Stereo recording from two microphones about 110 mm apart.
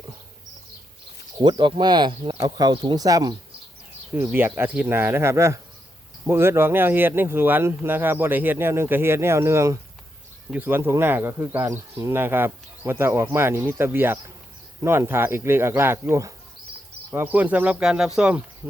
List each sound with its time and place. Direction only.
1.4 s speech: 45° right (ahead or behind)
4.3 s speech: 20° right (ahead or behind)